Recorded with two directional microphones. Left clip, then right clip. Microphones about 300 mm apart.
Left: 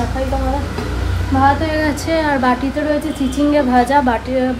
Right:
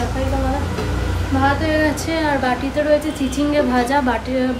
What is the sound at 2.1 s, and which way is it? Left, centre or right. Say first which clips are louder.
Speech: left 3 dB; centre.